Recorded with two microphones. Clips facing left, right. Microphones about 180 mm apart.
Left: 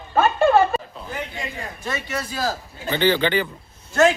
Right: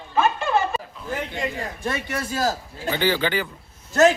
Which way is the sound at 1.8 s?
55° right (ahead or behind).